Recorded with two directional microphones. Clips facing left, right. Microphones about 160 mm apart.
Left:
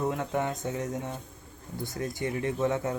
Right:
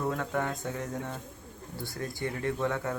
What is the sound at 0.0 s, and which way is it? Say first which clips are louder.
Speech: left 2 dB; 20° left (ahead or behind).